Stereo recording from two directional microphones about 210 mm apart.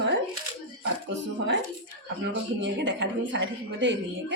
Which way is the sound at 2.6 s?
60° right (ahead or behind).